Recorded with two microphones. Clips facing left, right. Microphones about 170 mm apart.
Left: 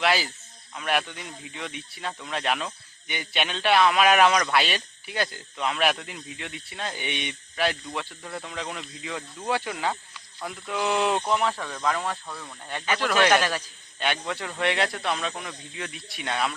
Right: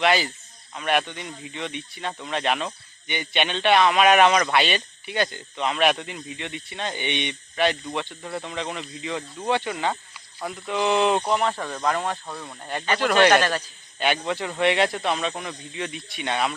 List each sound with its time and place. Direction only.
0.0 s speech: centre (ahead or behind)
11.5 s speech: 15° right (ahead or behind)
12.8 s a man's voice: 5° left (ahead or behind)
13.6 s a man's voice: 5° right (ahead or behind)